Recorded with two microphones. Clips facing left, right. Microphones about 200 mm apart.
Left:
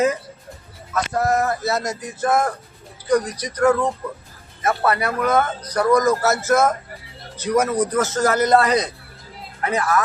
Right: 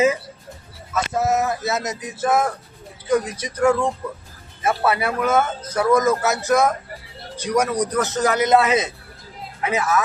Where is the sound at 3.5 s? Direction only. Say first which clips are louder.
Left 1 dB; 10° right (ahead or behind).